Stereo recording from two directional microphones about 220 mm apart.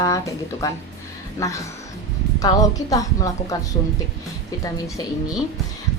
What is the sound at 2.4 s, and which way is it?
A woman's voice, 15° left (ahead or behind).